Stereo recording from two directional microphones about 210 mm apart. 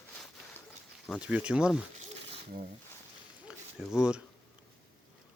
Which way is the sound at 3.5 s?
5° right (ahead or behind).